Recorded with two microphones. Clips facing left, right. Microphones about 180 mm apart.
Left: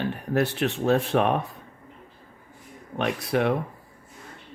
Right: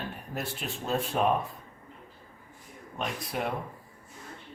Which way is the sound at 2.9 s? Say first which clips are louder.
Left 9 dB; 75° left (ahead or behind).